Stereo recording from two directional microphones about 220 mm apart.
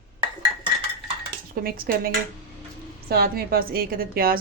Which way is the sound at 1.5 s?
40° right (ahead or behind).